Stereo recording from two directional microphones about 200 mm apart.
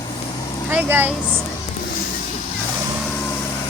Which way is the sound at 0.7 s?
10° right (ahead or behind).